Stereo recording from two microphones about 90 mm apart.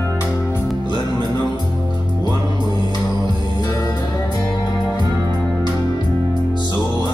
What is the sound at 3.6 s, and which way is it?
Music, 45° left (ahead or behind).